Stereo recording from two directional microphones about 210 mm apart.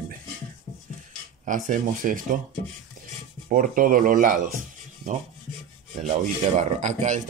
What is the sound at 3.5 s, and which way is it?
Speech, 40° right (ahead or behind).